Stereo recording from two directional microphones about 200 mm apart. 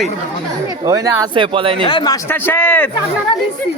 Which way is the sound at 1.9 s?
25° left (ahead or behind).